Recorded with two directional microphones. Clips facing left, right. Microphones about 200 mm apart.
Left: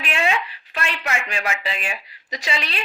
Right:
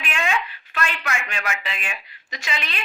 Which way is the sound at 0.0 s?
35° left (ahead or behind).